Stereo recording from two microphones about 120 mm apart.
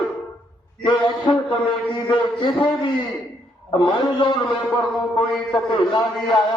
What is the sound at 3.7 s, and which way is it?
A man's voice, 40° left (ahead or behind).